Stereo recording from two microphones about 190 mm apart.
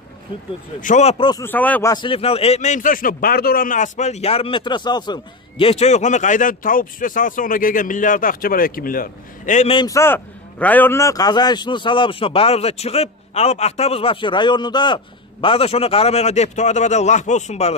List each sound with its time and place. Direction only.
0.7 s a man's voice: 40° left (ahead or behind)
1.4 s a man's voice: 10° left (ahead or behind); by 9.8 s 40° left (ahead or behind)
9.8 s a man's voice: 15° left (ahead or behind); by 17.7 s 35° left (ahead or behind)